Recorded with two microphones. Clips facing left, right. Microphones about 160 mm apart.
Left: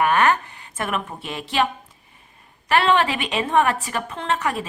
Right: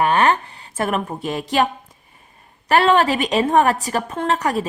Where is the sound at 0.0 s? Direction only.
30° right (ahead or behind).